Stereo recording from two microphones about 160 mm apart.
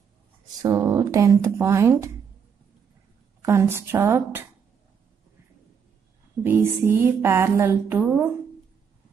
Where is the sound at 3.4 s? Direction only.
15° right (ahead or behind).